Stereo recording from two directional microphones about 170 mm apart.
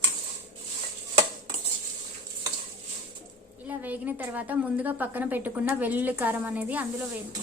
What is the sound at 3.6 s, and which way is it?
A woman's voice, 10° right (ahead or behind).